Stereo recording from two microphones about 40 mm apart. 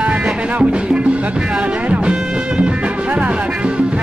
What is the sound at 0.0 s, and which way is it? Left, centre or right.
Music, right.